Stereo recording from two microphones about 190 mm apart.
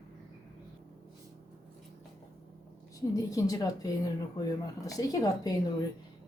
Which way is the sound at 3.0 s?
20° left (ahead or behind).